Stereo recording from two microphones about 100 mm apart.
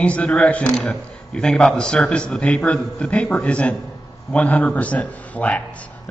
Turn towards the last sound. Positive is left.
turn(degrees=15)  # may be behind; listen again after turning